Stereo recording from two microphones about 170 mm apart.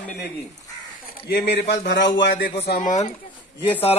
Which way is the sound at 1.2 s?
75° left (ahead or behind).